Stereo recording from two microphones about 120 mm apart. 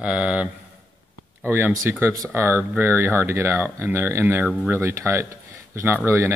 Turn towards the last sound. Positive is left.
turn(degrees=-20)  # may be behind; listen again after turning